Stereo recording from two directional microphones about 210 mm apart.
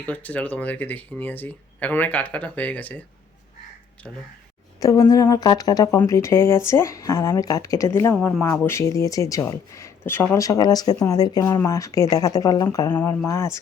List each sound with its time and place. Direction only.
0.0 s speech: 5° left (ahead or behind)
4.8 s speech: 15° left (ahead or behind)